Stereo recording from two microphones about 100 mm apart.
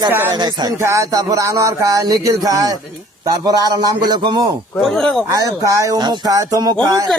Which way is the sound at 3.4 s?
40° right (ahead or behind).